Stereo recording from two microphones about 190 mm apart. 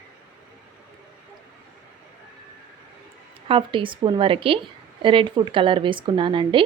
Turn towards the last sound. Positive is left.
turn(degrees=-25)  # may be behind; listen again after turning